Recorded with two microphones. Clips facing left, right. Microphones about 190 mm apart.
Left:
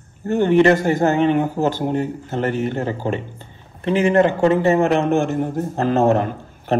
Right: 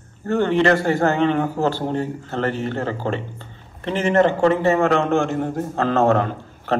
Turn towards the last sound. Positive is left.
turn(degrees=15)  # may be behind; listen again after turning